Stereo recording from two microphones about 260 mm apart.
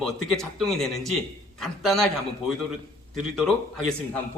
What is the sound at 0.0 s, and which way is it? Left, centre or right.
Speech, centre.